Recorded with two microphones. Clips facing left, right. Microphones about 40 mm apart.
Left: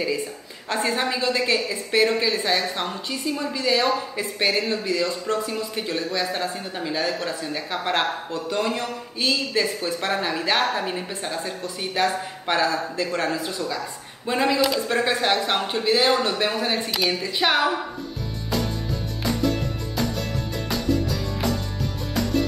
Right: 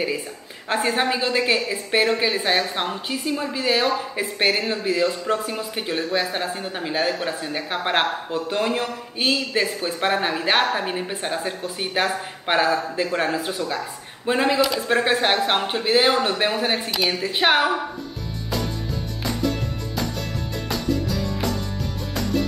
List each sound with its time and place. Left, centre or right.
0.7 s speech: right
11.2 s speech: right
18.5 s music: centre